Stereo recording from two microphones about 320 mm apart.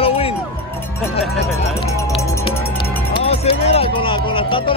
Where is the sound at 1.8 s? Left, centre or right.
Centre.